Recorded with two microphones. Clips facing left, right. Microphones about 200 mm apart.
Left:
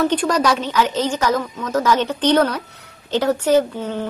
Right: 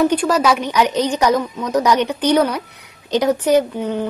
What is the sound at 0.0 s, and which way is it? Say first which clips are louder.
Speech: right 2 dB; 10° right (ahead or behind).